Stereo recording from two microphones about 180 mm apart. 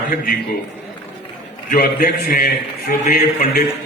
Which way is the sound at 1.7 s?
55° left (ahead or behind).